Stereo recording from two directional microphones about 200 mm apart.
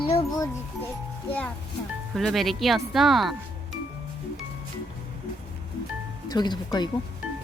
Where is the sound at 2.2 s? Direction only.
Centre (ahead or behind).